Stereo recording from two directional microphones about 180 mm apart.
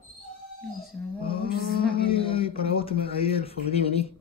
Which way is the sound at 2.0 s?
30° left (ahead or behind).